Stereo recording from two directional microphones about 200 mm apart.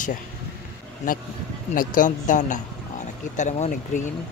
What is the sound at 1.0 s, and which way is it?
Speech, 40° left (ahead or behind).